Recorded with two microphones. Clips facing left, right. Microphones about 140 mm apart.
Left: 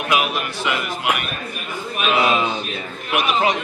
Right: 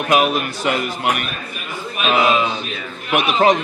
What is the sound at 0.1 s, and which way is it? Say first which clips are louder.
A man's voice: right 5 dB; 45° right (ahead or behind).